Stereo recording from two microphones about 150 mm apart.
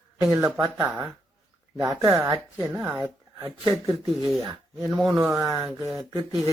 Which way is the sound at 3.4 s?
35° right (ahead or behind).